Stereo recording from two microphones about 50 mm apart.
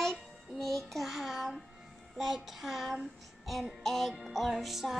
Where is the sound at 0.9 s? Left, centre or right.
Centre.